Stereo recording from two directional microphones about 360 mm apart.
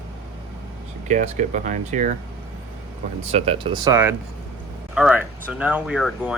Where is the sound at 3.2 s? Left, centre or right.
Centre.